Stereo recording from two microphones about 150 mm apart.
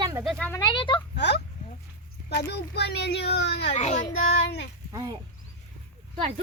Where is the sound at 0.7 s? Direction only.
30° left (ahead or behind).